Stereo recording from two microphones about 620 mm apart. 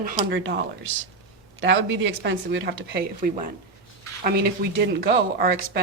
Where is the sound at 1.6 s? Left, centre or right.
Centre.